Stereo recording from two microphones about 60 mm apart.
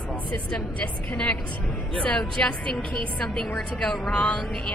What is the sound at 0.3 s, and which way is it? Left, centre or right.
A woman's voice, centre.